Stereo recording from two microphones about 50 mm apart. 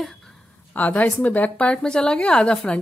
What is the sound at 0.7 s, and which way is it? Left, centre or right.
A woman's voice, left.